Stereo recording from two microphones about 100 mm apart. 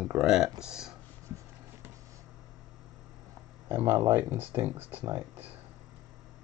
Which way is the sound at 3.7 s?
25° right (ahead or behind).